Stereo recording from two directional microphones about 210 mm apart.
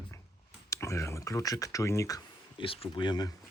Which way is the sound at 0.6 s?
15° left (ahead or behind).